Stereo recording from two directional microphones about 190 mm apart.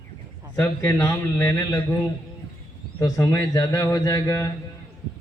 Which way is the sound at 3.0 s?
15° left (ahead or behind).